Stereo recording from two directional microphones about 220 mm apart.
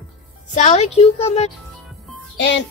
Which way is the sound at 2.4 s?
55° left (ahead or behind).